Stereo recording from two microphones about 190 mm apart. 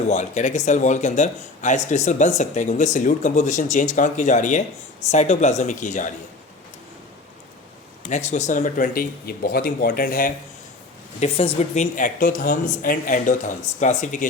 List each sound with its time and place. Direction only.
0.1 s speech: 40° left (ahead or behind)
8.1 s speech: 40° left (ahead or behind)
11.2 s speech: 35° left (ahead or behind)